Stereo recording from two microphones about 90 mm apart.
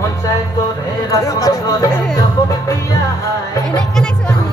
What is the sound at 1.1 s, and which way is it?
Speech, 40° left (ahead or behind).